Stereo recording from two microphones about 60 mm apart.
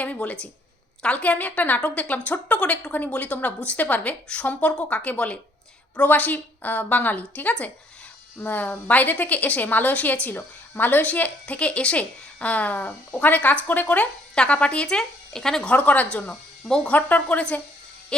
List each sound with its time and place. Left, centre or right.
0.0 s a woman's voice: left
15.7 s a woman's voice: left
16.3 s speech: centre
16.8 s a woman's voice: left
18.1 s music: centre